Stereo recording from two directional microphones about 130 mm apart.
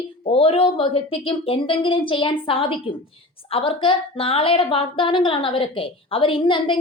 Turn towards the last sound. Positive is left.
turn(degrees=40)  # may be behind; listen again after turning